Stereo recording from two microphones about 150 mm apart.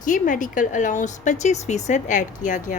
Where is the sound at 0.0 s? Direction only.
60° left (ahead or behind).